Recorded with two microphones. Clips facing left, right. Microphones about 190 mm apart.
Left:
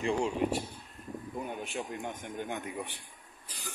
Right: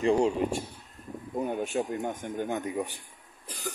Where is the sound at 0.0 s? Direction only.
40° right (ahead or behind).